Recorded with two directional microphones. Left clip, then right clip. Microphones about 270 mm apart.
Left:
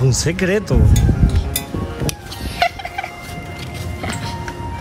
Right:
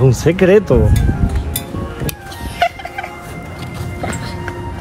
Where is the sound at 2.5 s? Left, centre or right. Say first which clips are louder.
Right 2 dB; left.